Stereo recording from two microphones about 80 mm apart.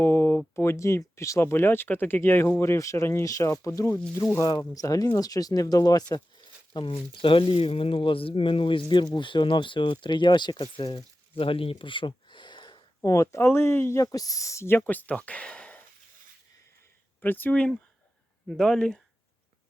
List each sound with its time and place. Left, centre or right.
0.0 s speech: left
6.7 s speech: left
11.4 s a sound: left
13.0 s speech: left
13.5 s speech: left
14.0 s speech: left; by 15.8 s centre
17.2 s speech: left
18.4 s speech: centre